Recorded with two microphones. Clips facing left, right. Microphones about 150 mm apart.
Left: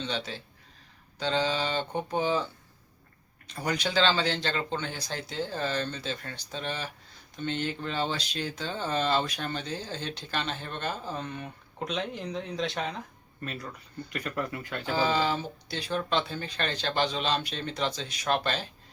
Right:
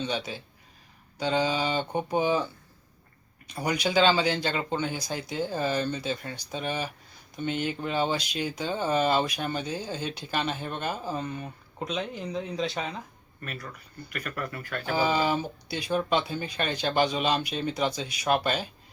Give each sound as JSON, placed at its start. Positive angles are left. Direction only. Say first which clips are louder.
{"t": 0.0, "sound": "speech", "louder": "right 3 dB", "side_deg": -10}
{"t": 3.4, "sound": "speech", "louder": "right 3 dB", "side_deg": -10}
{"t": 13.4, "sound": "speech", "louder": "left 1 dB", "side_deg": 25}
{"t": 14.9, "sound": "speech", "louder": "right 2 dB", "side_deg": -15}